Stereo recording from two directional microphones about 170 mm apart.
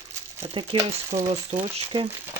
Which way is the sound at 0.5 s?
35° right (ahead or behind).